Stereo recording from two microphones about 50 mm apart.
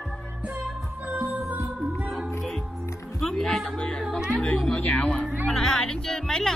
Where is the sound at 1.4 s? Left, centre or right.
Right.